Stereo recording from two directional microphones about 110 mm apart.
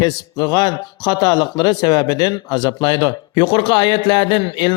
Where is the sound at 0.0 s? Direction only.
35° left (ahead or behind).